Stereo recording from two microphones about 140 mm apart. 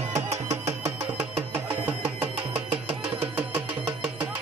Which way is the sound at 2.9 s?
45° right (ahead or behind).